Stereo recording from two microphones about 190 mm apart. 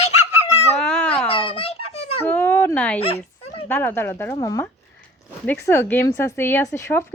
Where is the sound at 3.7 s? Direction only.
10° left (ahead or behind).